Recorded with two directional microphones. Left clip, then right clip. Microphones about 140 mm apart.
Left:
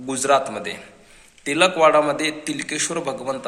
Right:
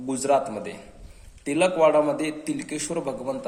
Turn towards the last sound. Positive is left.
turn(degrees=-10)  # may be behind; listen again after turning